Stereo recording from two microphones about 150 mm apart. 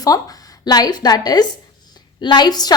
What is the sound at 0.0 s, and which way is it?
A woman's voice, 25° left (ahead or behind).